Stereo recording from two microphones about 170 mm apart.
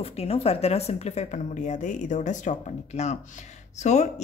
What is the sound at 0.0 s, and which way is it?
A woman's voice, 35° left (ahead or behind).